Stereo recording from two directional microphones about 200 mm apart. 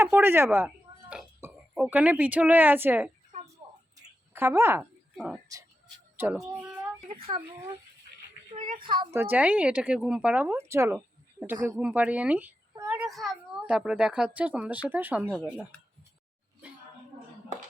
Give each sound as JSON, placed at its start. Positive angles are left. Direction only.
{"t": 0.0, "sound": "speech", "side_deg": -10}
{"t": 1.7, "sound": "speech", "side_deg": -5}
{"t": 4.4, "sound": "speech", "side_deg": -10}
{"t": 7.2, "sound": "a woman's voice", "side_deg": -25}
{"t": 8.8, "sound": "a woman's voice", "side_deg": -25}
{"t": 9.1, "sound": "speech", "side_deg": -10}